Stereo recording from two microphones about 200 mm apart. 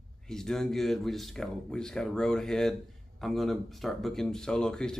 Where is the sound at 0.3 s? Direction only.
Centre (ahead or behind).